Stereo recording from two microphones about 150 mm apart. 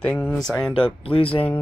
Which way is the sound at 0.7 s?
35° left (ahead or behind).